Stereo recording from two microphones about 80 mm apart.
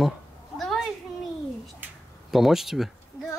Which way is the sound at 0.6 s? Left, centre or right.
Centre.